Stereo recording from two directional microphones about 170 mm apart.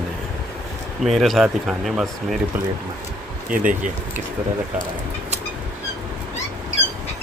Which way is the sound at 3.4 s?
50° right (ahead or behind).